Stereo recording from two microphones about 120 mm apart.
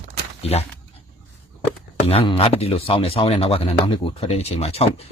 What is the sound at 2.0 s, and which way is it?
Speech, 55° left (ahead or behind).